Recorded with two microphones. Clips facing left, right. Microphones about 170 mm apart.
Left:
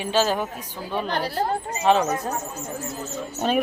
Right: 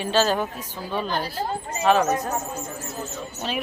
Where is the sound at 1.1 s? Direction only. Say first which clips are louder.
Left 2 dB; 70° left (ahead or behind).